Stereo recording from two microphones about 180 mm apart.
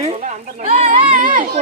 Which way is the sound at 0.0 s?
35° right (ahead or behind).